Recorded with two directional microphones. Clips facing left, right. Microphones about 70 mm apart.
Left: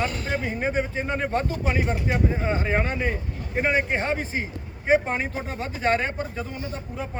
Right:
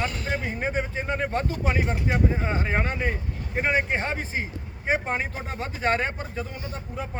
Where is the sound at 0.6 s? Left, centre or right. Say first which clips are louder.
Left 3 dB; right.